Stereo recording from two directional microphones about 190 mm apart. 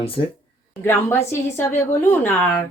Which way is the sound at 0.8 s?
10° left (ahead or behind).